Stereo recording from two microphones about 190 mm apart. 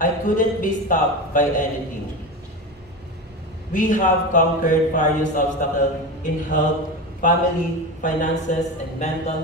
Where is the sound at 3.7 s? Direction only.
45° left (ahead or behind).